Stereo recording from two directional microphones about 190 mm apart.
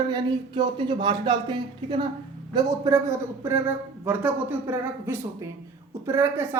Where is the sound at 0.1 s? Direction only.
25° right (ahead or behind).